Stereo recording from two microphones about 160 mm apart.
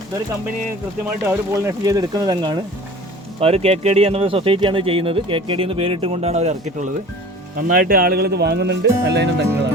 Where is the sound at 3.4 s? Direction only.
40° right (ahead or behind).